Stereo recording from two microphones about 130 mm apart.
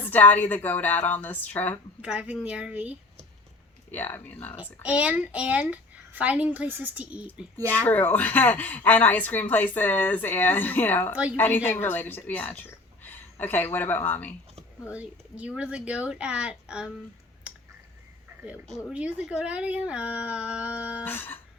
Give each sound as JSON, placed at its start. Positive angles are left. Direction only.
{"t": 0.1, "sound": "a woman's voice", "side_deg": 15}
{"t": 2.0, "sound": "a child's voice", "side_deg": -10}
{"t": 3.9, "sound": "a woman's voice", "side_deg": 15}
{"t": 4.6, "sound": "a child's voice", "side_deg": -10}
{"t": 7.5, "sound": "a woman's voice", "side_deg": 15}
{"t": 11.1, "sound": "a child's voice", "side_deg": -10}
{"t": 11.3, "sound": "a woman's voice", "side_deg": 15}
{"t": 14.9, "sound": "a child's voice", "side_deg": -10}
{"t": 18.9, "sound": "a child's voice", "side_deg": -10}
{"t": 21.0, "sound": "a woman's voice", "side_deg": 15}